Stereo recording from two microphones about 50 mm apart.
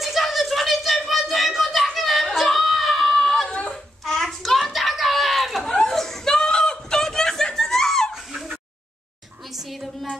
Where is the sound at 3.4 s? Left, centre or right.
Left.